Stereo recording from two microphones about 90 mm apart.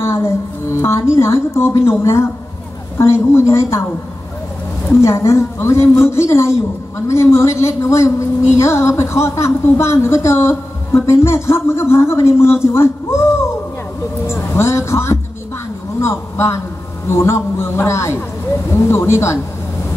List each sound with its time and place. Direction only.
0.0 s a woman's voice: 30° left (ahead or behind)
5.0 s a woman's voice: 30° left (ahead or behind)
14.2 s a woman's voice: 30° left (ahead or behind)